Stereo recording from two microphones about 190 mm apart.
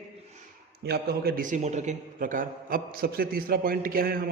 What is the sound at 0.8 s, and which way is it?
A man's voice, 55° right (ahead or behind).